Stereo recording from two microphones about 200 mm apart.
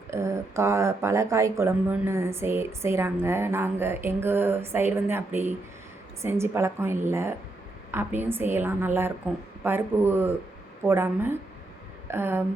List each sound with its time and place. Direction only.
0.1 s speech: 15° right (ahead or behind)